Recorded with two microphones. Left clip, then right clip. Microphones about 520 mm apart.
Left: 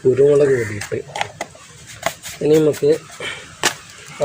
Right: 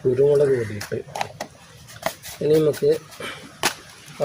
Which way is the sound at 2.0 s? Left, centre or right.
Right.